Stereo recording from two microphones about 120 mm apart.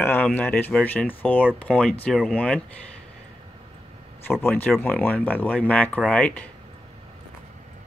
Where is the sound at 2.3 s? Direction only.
10° left (ahead or behind).